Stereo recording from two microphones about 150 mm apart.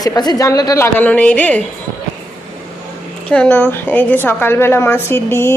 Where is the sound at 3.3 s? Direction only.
10° left (ahead or behind).